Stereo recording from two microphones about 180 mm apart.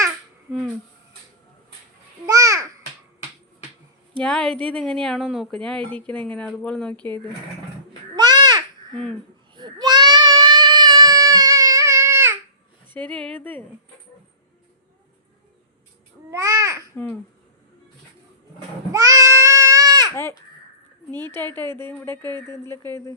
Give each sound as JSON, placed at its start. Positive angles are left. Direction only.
{"t": 2.2, "sound": "babbling", "side_deg": -20}
{"t": 4.2, "sound": "speech", "side_deg": 5}
{"t": 8.1, "sound": "babbling", "side_deg": -25}
{"t": 9.6, "sound": "child singing", "side_deg": -25}
{"t": 12.9, "sound": "a woman's voice", "side_deg": 5}
{"t": 16.3, "sound": "babbling", "side_deg": -20}
{"t": 18.9, "sound": "goat", "side_deg": -20}
{"t": 21.1, "sound": "a woman's voice", "side_deg": 10}